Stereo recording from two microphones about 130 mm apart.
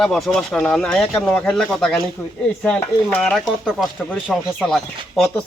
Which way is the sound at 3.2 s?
Centre (ahead or behind).